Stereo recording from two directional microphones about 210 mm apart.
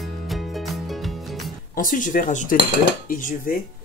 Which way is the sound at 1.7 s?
40° left (ahead or behind).